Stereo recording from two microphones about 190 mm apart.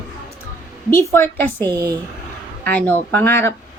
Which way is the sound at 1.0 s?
10° left (ahead or behind).